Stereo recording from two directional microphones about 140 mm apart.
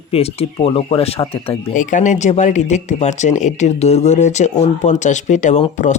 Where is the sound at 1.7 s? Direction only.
65° left (ahead or behind).